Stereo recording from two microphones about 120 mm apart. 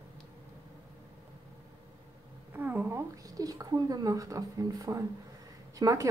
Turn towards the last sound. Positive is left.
turn(degrees=-30)  # may be behind; listen again after turning